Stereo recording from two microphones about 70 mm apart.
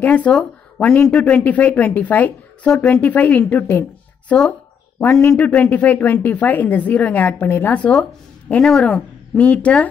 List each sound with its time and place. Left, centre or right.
0.0 s speech: left
0.3 s speech: centre
8.5 s speech: centre
9.4 s speech: centre